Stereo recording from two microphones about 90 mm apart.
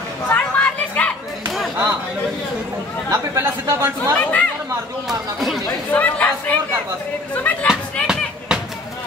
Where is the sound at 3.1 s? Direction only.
35° right (ahead or behind).